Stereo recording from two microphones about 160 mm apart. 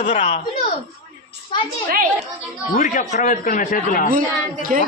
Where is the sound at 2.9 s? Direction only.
50° left (ahead or behind).